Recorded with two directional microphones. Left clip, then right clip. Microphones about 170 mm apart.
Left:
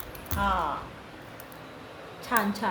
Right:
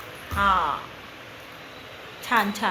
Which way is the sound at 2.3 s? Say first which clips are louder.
Right 5 dB; 20° right (ahead or behind).